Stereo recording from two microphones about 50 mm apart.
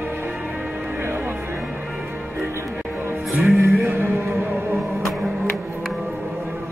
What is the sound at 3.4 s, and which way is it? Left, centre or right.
Music, right.